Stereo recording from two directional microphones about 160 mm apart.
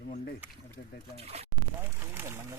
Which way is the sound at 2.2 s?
15° right (ahead or behind).